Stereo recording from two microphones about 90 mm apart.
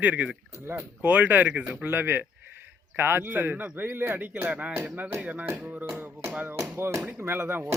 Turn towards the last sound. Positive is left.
turn(degrees=-25)  # may be behind; listen again after turning